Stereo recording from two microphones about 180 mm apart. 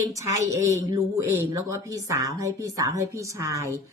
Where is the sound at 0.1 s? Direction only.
15° right (ahead or behind).